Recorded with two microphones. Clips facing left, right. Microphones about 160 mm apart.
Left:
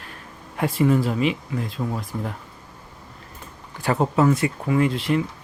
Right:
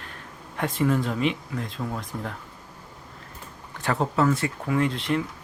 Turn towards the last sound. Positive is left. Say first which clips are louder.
# left 4 dB
turn(degrees=5)  # may be behind; listen again after turning